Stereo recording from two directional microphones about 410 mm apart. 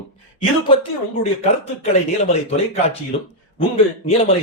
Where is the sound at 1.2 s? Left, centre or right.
Centre.